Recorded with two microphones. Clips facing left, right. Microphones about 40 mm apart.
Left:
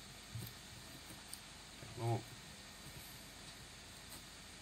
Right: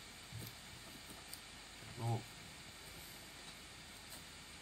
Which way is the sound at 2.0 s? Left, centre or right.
Right.